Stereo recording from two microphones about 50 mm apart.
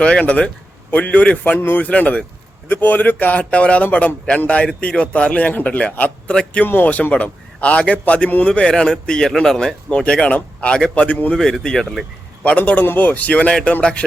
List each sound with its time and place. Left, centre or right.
0.0 s a man's voice: centre
1.5 s speech: left
1.8 s a man's voice: left
2.8 s a man's voice: left
6.3 s speech: centre
6.8 s a man's voice: left
8.4 s a man's voice: centre
11.3 s speech: centre
12.4 s a man's voice: left